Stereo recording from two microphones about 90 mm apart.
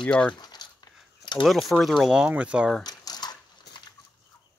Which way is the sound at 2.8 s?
50° left (ahead or behind).